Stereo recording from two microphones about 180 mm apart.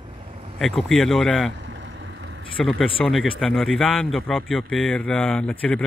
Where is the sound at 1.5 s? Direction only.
80° right.